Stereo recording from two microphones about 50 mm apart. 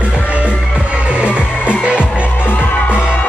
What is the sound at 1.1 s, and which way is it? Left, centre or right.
Music, right.